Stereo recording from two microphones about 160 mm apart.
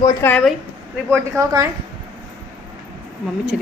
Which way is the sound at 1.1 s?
20° right (ahead or behind).